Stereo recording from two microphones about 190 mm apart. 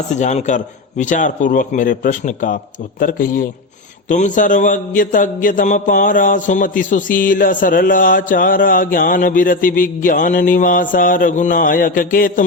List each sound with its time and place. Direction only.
0.1 s a man's voice: 40° left (ahead or behind)